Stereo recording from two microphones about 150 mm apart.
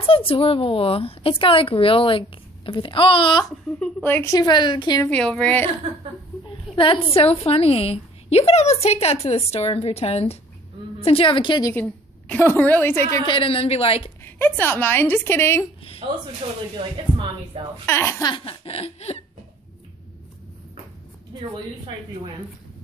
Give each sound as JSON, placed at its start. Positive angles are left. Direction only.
{"t": 0.0, "sound": "a woman's voice", "side_deg": 40}
{"t": 3.8, "sound": "a woman's voice", "side_deg": 10}
{"t": 5.0, "sound": "a woman's voice", "side_deg": 10}
{"t": 6.7, "sound": "a woman's voice", "side_deg": 35}
{"t": 11.7, "sound": "a woman's voice", "side_deg": 10}
{"t": 13.2, "sound": "a woman's voice", "side_deg": 35}
{"t": 14.2, "sound": "a woman's voice", "side_deg": 15}
{"t": 16.0, "sound": "a man's voice", "side_deg": -35}
{"t": 17.8, "sound": "a woman's voice", "side_deg": 15}
{"t": 18.3, "sound": "a woman's voice", "side_deg": 35}